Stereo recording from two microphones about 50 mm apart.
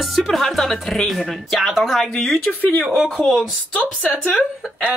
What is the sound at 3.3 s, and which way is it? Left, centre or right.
Speech, left.